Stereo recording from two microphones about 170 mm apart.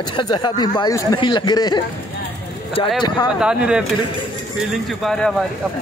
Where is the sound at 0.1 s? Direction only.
25° left (ahead or behind).